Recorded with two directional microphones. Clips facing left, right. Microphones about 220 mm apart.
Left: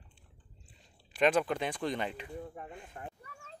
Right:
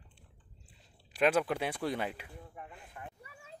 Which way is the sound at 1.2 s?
5° right (ahead or behind).